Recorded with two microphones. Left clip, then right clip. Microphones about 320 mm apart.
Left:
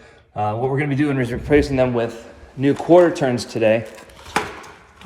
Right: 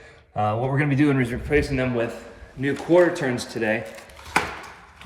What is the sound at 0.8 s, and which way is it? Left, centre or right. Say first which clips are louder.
A man's voice: left 1 dB; centre.